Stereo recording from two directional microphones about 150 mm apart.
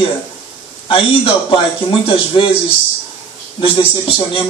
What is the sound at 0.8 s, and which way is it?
Speech, 35° left (ahead or behind).